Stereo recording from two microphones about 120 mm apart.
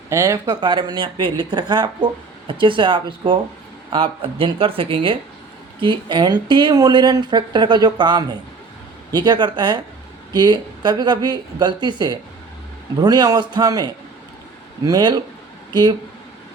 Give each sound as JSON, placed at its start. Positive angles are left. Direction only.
{"t": 0.1, "sound": "speech", "side_deg": -25}
{"t": 0.6, "sound": "a woman's voice", "side_deg": -40}